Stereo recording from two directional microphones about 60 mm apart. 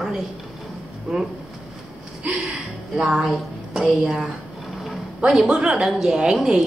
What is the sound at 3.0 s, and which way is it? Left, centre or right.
Speech, centre.